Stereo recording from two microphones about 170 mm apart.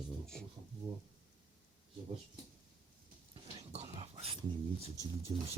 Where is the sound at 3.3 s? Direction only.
40° right (ahead or behind).